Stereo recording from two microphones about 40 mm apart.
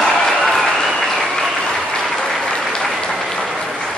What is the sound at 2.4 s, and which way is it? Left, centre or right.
Applause, centre.